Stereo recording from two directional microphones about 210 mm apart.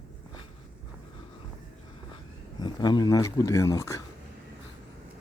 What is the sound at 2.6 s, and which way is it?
Speech, 20° left (ahead or behind).